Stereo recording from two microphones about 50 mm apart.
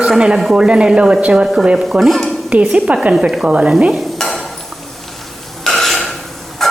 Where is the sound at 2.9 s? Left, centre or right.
Right.